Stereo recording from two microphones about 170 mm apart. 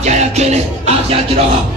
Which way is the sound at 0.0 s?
40° right (ahead or behind).